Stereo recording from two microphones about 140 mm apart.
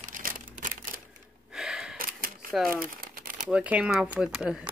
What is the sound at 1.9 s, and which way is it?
Camera, 90° right.